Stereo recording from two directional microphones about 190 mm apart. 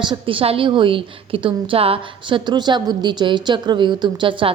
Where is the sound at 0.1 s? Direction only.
30° right (ahead or behind).